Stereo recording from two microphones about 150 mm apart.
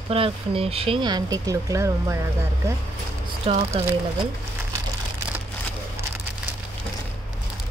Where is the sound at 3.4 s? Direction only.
45° right (ahead or behind).